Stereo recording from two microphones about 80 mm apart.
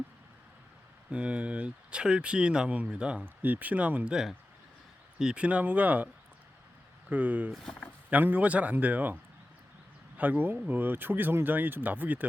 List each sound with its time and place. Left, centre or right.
1.1 s speech: centre
7.1 s speech: centre
7.5 s speech: centre
8.1 s speech: right
10.2 s speech: right